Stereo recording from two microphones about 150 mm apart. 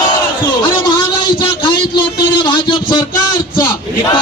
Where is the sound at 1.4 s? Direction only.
35° left (ahead or behind).